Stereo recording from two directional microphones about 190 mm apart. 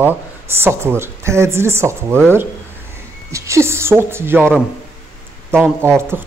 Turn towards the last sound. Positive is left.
turn(degrees=-10)  # may be behind; listen again after turning